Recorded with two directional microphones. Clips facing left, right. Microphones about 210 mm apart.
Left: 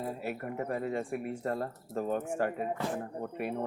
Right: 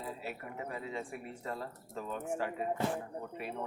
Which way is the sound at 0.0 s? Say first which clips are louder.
Left 6 dB; 55° left (ahead or behind).